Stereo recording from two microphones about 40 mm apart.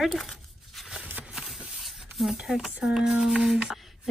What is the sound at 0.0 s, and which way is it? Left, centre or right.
Speech, centre.